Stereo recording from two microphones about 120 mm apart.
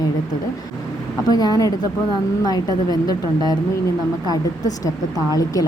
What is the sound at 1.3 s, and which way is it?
A woman's voice, 35° left (ahead or behind).